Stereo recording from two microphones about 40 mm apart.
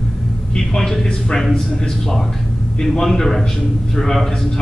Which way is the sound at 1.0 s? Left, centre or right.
Centre.